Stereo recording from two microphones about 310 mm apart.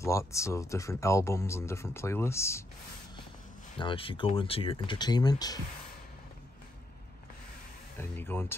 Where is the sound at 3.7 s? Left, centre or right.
Centre.